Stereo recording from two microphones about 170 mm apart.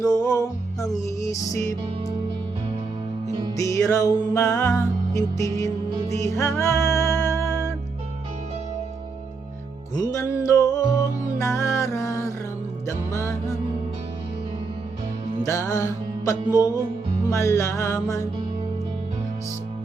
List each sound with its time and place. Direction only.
0.0 s music: 20° left (ahead or behind)
3.6 s music: 20° left (ahead or behind)
9.9 s music: 20° left (ahead or behind)
15.4 s music: 20° left (ahead or behind)